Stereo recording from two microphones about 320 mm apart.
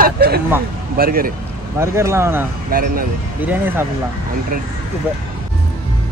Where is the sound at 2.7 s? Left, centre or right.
Right.